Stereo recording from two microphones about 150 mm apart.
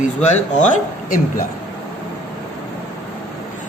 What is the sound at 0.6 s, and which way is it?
Speech, 65° left (ahead or behind).